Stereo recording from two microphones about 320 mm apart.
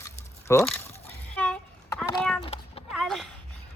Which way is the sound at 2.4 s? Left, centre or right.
Centre.